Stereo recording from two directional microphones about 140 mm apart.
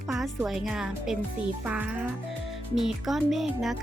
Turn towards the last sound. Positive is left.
turn(degrees=0)  # may be behind; listen again after turning